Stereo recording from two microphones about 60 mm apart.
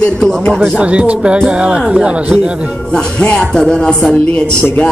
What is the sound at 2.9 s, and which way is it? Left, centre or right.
Music, centre.